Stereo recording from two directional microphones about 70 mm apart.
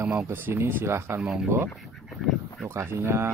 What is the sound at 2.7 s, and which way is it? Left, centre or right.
Speech, right.